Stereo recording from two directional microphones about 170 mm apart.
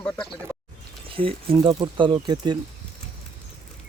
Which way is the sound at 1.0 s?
30° right (ahead or behind).